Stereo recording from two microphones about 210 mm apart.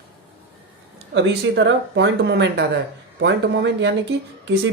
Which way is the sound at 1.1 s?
55° right (ahead or behind).